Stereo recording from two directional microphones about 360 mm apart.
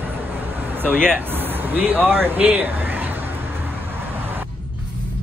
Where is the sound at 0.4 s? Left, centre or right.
Centre.